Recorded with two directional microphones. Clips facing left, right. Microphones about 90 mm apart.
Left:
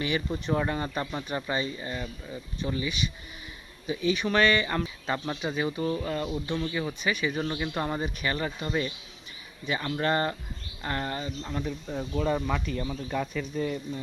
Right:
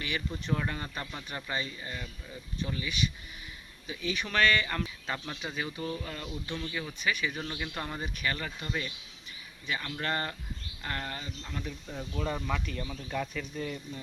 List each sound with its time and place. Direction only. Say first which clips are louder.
0.0 s speech: left 6 dB; 20° left (ahead or behind)
7.0 s speech: left 3 dB; 10° left (ahead or behind)